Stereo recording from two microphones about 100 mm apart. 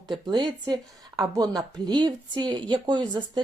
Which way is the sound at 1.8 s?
50° right (ahead or behind).